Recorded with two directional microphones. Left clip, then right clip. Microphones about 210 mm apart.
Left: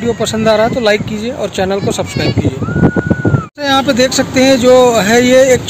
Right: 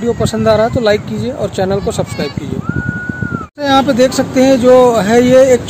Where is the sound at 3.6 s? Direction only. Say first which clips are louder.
Right 1 dB; 5° right (ahead or behind).